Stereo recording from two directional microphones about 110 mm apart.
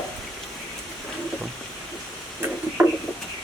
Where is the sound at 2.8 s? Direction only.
15° right (ahead or behind).